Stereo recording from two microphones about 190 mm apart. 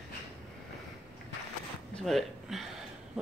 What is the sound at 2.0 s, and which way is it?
Speech, centre (ahead or behind).